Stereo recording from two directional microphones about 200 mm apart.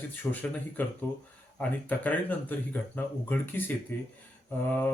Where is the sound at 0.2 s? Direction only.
10° left (ahead or behind).